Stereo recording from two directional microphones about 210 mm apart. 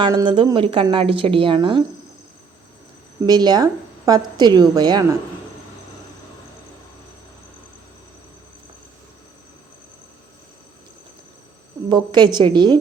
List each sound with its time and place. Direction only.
0.0 s a woman's voice: 20° right (ahead or behind)
3.2 s a woman's voice: 20° right (ahead or behind)
11.9 s a woman's voice: 20° right (ahead or behind)